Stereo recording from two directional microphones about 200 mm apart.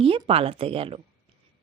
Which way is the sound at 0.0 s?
30° right (ahead or behind).